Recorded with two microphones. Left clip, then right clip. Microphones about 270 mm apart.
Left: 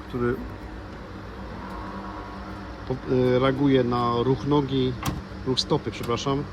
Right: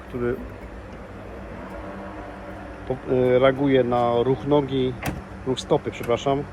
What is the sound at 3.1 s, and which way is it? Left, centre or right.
Speech, centre.